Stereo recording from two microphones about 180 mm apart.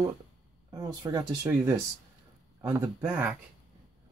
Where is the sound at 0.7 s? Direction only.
20° right (ahead or behind).